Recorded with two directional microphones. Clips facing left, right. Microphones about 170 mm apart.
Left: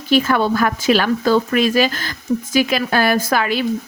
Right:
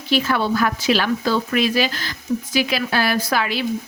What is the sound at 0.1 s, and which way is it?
Speech, 50° left (ahead or behind).